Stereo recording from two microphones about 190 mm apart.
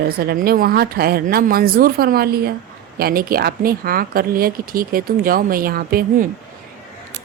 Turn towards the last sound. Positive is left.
turn(degrees=-50)  # may be behind; listen again after turning